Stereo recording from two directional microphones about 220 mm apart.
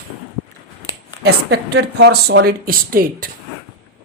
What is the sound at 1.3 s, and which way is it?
A woman's voice, 50° right (ahead or behind).